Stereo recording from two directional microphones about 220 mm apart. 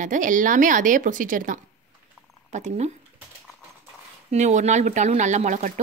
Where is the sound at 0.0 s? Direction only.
35° right (ahead or behind).